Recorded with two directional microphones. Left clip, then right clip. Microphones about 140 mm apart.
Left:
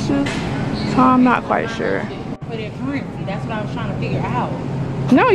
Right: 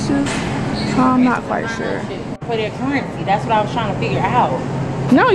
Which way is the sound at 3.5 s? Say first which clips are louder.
Right 9 dB; 30° right (ahead or behind).